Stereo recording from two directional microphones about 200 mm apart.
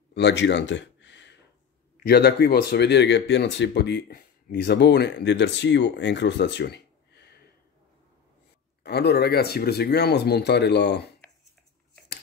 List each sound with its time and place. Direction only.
0.1 s a sound: 60° left (ahead or behind)
2.0 s speech: 50° left (ahead or behind)
8.8 s speech: 55° left (ahead or behind)